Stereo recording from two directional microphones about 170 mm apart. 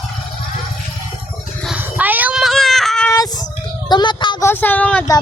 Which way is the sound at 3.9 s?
25° left (ahead or behind).